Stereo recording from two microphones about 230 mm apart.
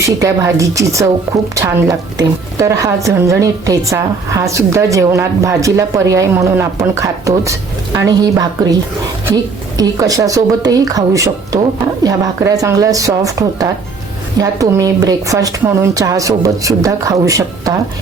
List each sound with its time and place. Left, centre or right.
0.0 s a woman's voice: centre